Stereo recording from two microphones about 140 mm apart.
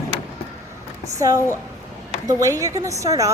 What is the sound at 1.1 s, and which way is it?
A woman's voice, 25° right (ahead or behind).